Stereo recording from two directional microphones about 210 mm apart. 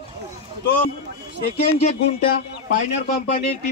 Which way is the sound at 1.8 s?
40° left (ahead or behind).